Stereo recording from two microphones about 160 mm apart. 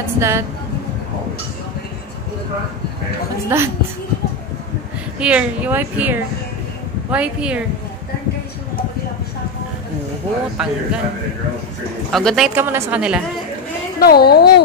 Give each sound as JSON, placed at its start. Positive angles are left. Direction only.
{"t": 0.2, "sound": "a woman's voice", "side_deg": -15}
{"t": 3.4, "sound": "a woman's voice", "side_deg": -15}
{"t": 5.2, "sound": "a woman's voice", "side_deg": -5}
{"t": 10.6, "sound": "speech", "side_deg": -5}
{"t": 12.1, "sound": "speech", "side_deg": 0}
{"t": 12.5, "sound": "a woman's voice", "side_deg": -15}
{"t": 13.9, "sound": "a woman's voice", "side_deg": 75}